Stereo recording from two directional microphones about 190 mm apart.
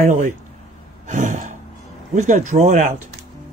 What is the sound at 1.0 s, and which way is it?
Sigh, 40° right (ahead or behind).